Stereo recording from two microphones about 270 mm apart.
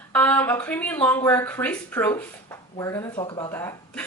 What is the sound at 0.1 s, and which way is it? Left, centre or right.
Speech, centre.